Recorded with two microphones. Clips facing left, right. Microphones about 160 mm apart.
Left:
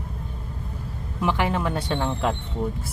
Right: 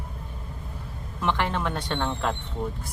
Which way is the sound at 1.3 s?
5° left (ahead or behind).